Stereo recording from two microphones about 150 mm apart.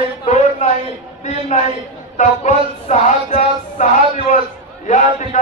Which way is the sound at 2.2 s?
55° left (ahead or behind).